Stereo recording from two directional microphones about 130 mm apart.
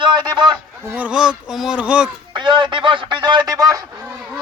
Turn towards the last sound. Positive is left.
turn(degrees=-30)  # may be behind; listen again after turning